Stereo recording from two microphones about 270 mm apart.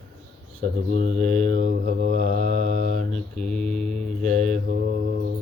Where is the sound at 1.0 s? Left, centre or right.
Right.